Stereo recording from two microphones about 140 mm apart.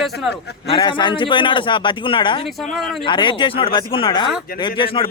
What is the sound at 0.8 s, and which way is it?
Speech, 35° left (ahead or behind).